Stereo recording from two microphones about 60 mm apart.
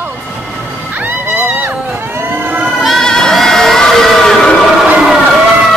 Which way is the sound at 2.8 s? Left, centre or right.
Centre.